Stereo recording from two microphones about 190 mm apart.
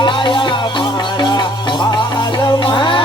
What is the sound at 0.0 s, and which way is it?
Music, 25° left (ahead or behind).